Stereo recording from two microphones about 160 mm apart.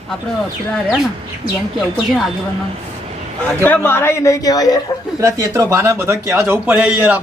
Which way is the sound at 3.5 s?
10° left (ahead or behind).